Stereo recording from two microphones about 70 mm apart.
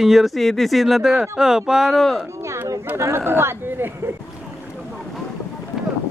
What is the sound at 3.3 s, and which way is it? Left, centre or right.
Speech, right.